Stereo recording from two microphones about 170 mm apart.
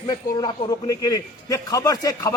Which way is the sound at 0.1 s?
25° left (ahead or behind).